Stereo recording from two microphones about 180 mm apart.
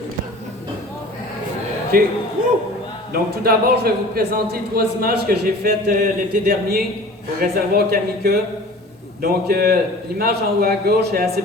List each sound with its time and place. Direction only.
1.9 s a man's voice: 55° right (ahead or behind)